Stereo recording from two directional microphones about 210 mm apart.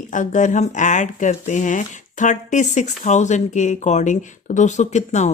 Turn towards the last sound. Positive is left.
turn(degrees=35)  # may be behind; listen again after turning